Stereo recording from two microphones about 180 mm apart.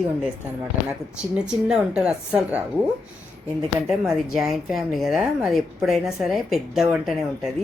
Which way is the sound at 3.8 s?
Centre (ahead or behind).